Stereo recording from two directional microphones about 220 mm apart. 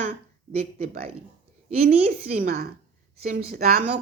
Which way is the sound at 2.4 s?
45° right (ahead or behind).